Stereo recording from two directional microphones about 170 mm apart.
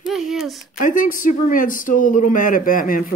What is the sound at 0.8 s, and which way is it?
Speech, 50° left (ahead or behind).